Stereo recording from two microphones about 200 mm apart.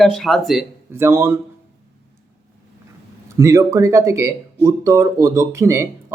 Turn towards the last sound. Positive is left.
turn(degrees=-15)  # may be behind; listen again after turning